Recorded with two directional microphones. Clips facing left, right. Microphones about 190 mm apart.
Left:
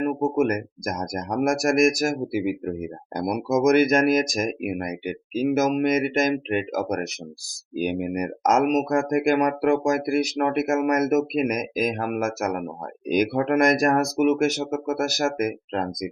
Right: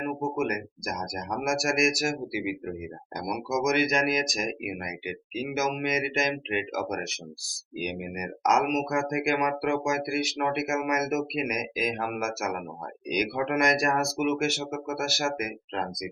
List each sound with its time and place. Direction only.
0.0 s speech: 45° left (ahead or behind)